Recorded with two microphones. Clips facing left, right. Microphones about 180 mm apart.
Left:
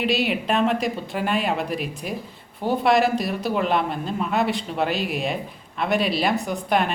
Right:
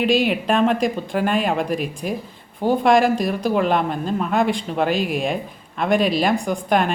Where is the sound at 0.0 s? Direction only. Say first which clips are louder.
Right 4 dB; 45° right (ahead or behind).